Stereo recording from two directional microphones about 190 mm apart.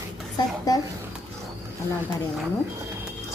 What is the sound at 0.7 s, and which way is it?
Speech, 20° left (ahead or behind).